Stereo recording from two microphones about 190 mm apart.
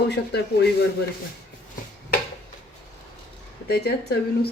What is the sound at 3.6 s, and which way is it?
Speech, 55° left (ahead or behind).